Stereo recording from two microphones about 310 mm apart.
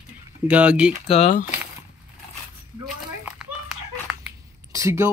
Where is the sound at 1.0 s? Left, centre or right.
Centre.